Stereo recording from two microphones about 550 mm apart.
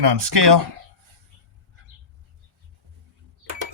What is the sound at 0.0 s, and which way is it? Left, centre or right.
Speech, right.